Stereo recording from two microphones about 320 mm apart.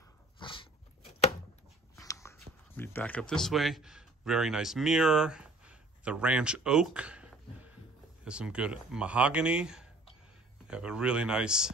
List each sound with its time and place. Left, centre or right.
0.4 s dog: centre
2.0 s speech: centre